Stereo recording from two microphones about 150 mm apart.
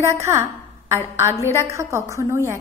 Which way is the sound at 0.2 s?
15° right (ahead or behind).